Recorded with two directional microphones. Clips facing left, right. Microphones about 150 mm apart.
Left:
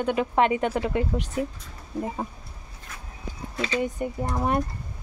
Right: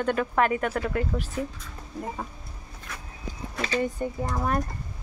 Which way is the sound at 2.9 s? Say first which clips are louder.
Right 3 dB; 70° right (ahead or behind).